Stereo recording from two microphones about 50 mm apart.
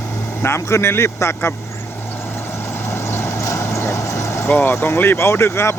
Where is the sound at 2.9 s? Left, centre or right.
Left.